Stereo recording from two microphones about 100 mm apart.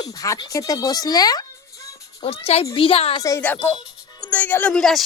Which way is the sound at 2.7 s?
65° left (ahead or behind).